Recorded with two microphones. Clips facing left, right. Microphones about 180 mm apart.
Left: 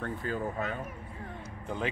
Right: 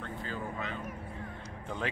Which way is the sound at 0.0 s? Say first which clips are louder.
Left 5 dB; 50° left (ahead or behind).